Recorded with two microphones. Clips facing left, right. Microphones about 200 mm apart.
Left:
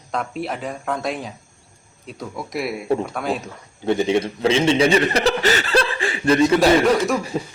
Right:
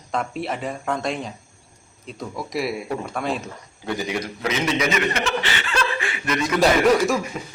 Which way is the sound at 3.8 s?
25° left (ahead or behind).